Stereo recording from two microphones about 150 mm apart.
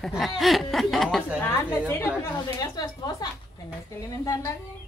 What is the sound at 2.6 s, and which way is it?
Speech, 25° left (ahead or behind).